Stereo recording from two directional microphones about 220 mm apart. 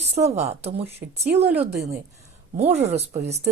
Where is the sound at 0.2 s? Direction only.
30° right (ahead or behind).